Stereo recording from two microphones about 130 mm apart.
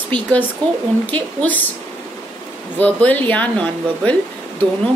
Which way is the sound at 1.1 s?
10° left (ahead or behind).